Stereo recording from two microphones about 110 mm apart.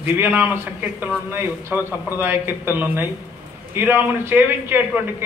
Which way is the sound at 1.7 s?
15° right (ahead or behind).